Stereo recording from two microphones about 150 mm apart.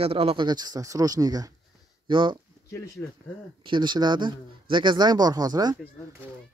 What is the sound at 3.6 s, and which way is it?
Speech, 30° right (ahead or behind).